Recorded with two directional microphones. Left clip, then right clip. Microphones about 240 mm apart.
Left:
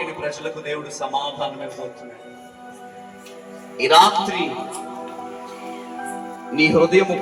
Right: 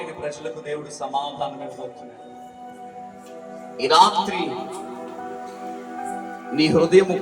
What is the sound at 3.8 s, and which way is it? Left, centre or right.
Speech, left.